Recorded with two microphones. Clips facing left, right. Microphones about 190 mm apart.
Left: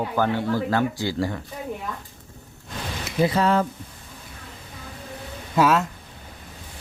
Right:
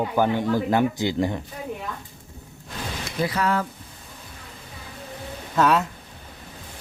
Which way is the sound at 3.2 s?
25° left (ahead or behind).